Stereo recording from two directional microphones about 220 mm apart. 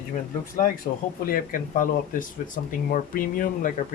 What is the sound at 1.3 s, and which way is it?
Speech, 40° left (ahead or behind).